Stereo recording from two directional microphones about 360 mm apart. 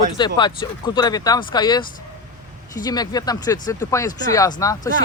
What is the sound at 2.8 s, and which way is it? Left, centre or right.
Speech, centre.